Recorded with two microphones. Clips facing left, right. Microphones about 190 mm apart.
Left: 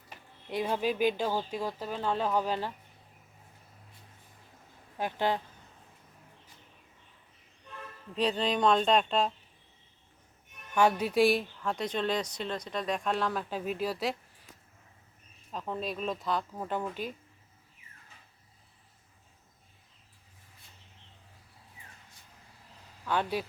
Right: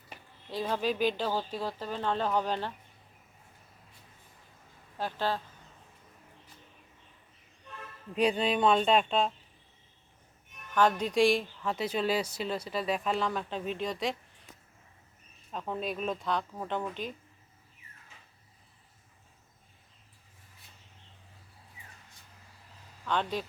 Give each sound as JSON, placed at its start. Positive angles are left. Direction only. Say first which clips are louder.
{"t": 0.5, "sound": "speech", "louder": "left 1 dB", "side_deg": 10}
{"t": 4.9, "sound": "speech", "louder": "left 2 dB", "side_deg": 15}
{"t": 8.1, "sound": "speech", "louder": "right 2 dB", "side_deg": -10}
{"t": 10.8, "sound": "speech", "louder": "left 1 dB", "side_deg": 10}
{"t": 15.5, "sound": "speech", "louder": "right 1 dB", "side_deg": 0}
{"t": 23.0, "sound": "speech", "louder": "left 1 dB", "side_deg": 10}